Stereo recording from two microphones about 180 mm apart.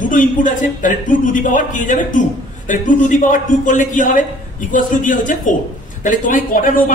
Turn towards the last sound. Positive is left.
turn(degrees=50)  # may be behind; listen again after turning